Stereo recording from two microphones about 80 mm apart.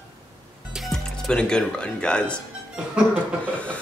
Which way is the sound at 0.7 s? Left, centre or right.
Centre.